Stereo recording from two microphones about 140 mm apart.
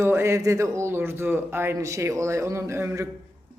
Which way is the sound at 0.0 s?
20° right (ahead or behind).